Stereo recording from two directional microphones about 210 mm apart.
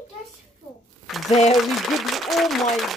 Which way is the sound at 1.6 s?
Centre (ahead or behind).